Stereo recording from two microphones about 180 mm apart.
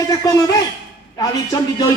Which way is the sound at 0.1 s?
20° left (ahead or behind).